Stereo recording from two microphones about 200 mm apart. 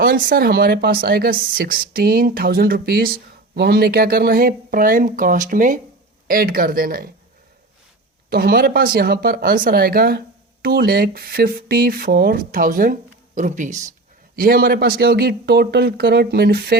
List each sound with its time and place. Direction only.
0.0 s speech: 45° right (ahead or behind)
8.3 s speech: 50° right (ahead or behind)
14.3 s speech: 50° right (ahead or behind)